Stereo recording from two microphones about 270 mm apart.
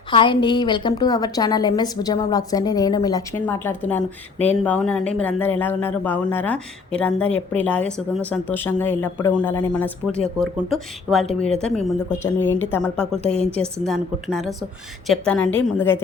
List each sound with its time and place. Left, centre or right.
0.1 s a woman's voice: centre
13.2 s a woman's voice: left
13.8 s a woman's voice: centre